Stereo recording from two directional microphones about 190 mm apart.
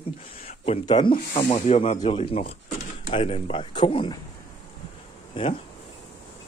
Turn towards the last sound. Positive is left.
turn(degrees=25)  # may be behind; listen again after turning